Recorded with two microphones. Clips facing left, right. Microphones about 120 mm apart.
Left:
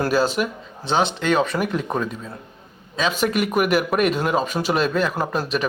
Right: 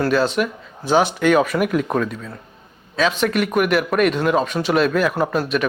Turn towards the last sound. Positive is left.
turn(degrees=0)  # may be behind; listen again after turning